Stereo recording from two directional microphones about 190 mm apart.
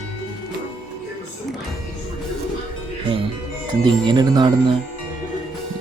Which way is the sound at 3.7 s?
25° right (ahead or behind).